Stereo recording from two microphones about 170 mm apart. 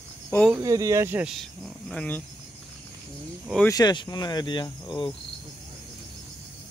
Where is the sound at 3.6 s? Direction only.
25° left (ahead or behind).